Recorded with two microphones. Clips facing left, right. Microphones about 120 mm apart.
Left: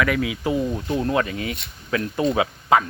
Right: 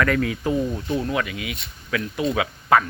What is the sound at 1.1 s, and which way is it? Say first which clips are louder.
Speech: left 3 dB; 35° left (ahead or behind).